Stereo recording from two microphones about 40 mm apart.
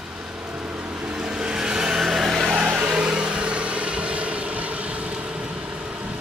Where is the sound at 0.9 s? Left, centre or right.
Right; by 2.4 s centre.